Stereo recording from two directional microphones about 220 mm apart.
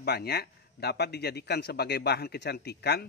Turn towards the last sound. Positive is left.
turn(degrees=45)  # may be behind; listen again after turning